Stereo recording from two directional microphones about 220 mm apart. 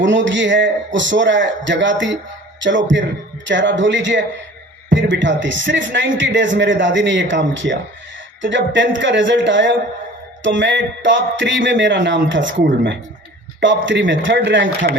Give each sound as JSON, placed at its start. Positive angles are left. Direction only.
{"t": 0.0, "sound": "a man's voice", "side_deg": -55}